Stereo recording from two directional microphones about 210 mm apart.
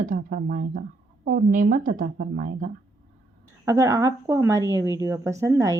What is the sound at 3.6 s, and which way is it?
A woman's voice, 15° right (ahead or behind).